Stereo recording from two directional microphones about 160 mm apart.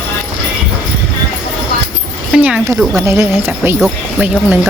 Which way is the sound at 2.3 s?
5° right (ahead or behind).